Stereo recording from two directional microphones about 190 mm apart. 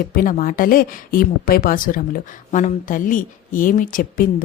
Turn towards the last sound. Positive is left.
turn(degrees=45)  # may be behind; listen again after turning